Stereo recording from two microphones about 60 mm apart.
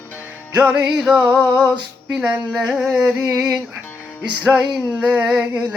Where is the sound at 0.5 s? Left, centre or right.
Right.